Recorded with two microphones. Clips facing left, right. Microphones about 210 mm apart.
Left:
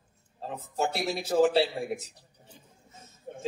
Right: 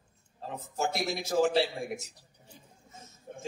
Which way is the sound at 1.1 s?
30° left (ahead or behind).